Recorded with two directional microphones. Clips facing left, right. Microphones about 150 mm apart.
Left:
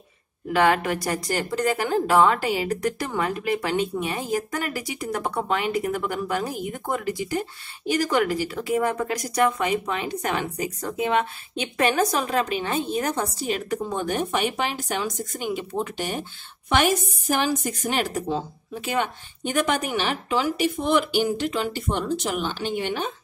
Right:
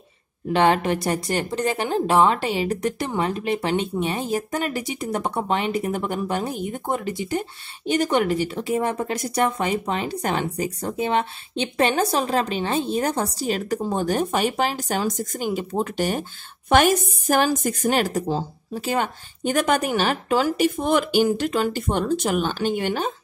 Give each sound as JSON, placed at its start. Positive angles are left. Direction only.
{"t": 0.5, "sound": "speech", "side_deg": -25}